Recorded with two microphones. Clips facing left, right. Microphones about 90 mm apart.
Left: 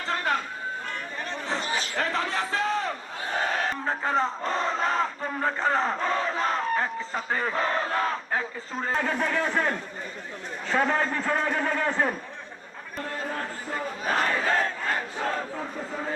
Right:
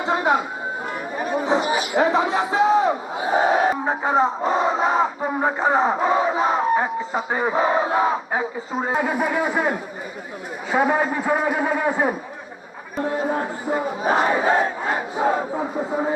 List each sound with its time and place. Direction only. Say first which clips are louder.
0.0 s a sound: right 8 dB; 10° right (ahead or behind)
3.8 s crowd: right 6 dB; 10° right (ahead or behind)
4.4 s battle cry: right 7 dB; 10° right (ahead or behind)
5.5 s battle cry: right 7 dB; 10° right (ahead or behind)
10.7 s a man's voice: right 5 dB; 10° right (ahead or behind)
13.0 s battle cry: right 9 dB; 20° right (ahead or behind)